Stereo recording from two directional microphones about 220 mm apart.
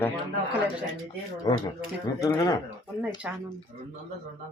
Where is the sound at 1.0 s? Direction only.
20° left (ahead or behind).